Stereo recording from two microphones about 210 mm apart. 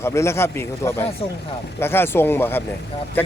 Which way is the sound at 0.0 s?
15° left (ahead or behind).